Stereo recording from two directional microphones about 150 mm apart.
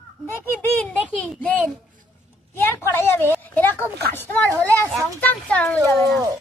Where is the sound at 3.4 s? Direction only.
15° left (ahead or behind).